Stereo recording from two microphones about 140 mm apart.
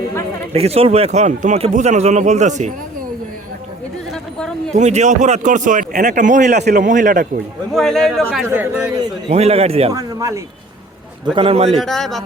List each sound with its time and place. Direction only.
0.5 s speech: 45° right (ahead or behind)
4.1 s a sound: 5° left (ahead or behind)
4.7 s speech: 55° right (ahead or behind)
7.7 s speech: 5° left (ahead or behind)
8.4 s speech: 15° right (ahead or behind)
9.3 s a man's voice: 45° right (ahead or behind)
9.9 s a man's voice: 25° right (ahead or behind)
11.3 s a man's voice: 45° right (ahead or behind)
11.8 s speech: centre (ahead or behind)